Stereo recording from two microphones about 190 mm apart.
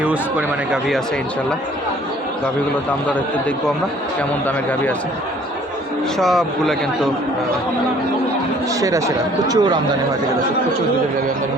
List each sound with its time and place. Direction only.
0.0 s speech: 5° right (ahead or behind)
6.1 s speech: centre (ahead or behind)
8.8 s speech: 15° right (ahead or behind)